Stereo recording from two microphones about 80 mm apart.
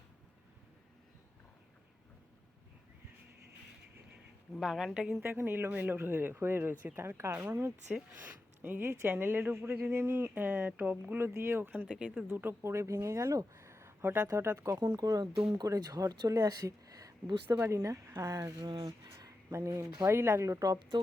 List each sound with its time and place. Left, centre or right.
4.5 s a woman's voice: centre
5.2 s speech: right
12.3 s speech: right
17.6 s speech: right